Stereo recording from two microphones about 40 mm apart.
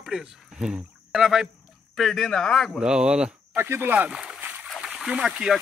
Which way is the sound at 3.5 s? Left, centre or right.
Right.